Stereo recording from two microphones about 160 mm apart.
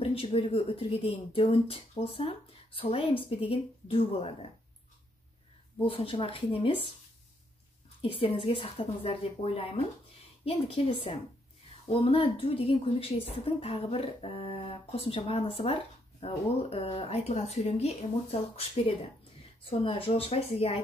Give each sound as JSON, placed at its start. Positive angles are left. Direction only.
{"t": 0.0, "sound": "a woman's voice", "side_deg": 35}
{"t": 5.9, "sound": "a woman's voice", "side_deg": 35}
{"t": 8.0, "sound": "a woman's voice", "side_deg": 35}
{"t": 11.9, "sound": "a woman's voice", "side_deg": 35}
{"t": 19.6, "sound": "a woman's voice", "side_deg": 35}